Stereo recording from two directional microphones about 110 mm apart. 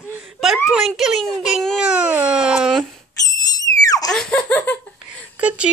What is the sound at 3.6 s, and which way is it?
Screaming, 35° left (ahead or behind).